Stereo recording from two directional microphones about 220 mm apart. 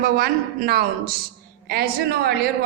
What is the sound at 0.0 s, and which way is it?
A woman's voice, 45° right (ahead or behind).